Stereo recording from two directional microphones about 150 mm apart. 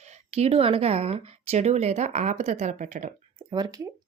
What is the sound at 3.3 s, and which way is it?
Speech, 30° right (ahead or behind).